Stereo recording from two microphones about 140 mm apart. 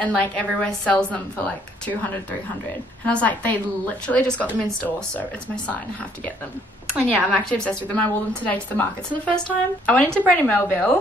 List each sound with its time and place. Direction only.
0.0 s a woman's voice: 10° left (ahead or behind)
3.1 s a woman's voice: 10° left (ahead or behind)
7.2 s a woman's voice: 5° left (ahead or behind)